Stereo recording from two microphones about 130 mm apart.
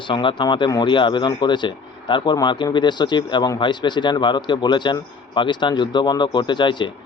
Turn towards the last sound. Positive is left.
turn(degrees=35)  # may be behind; listen again after turning